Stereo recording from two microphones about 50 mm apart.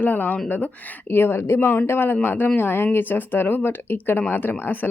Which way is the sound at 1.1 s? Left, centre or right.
Left.